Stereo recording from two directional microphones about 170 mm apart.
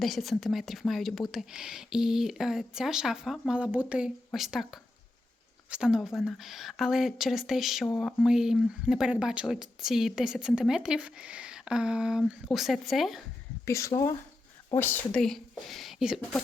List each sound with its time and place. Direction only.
0.0 s speech: centre (ahead or behind)
13.7 s speech: 15° left (ahead or behind); by 16.4 s centre (ahead or behind)